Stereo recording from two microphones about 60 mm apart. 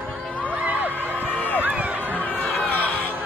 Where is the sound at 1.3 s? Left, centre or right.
Left.